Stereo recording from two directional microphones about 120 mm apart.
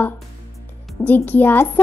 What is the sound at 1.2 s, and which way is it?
Speech, 15° left (ahead or behind).